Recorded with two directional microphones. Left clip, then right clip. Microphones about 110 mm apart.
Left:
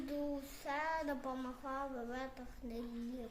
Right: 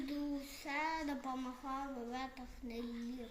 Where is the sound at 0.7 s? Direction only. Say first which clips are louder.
Left 1 dB; 30° left (ahead or behind).